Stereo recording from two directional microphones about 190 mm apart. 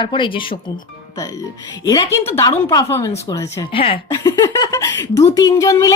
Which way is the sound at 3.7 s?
30° left (ahead or behind).